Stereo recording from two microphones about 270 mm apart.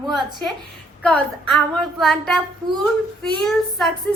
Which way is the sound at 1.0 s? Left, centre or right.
Centre.